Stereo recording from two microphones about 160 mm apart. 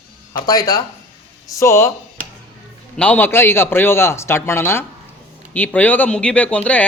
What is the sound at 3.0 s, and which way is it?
Speech, 10° left (ahead or behind).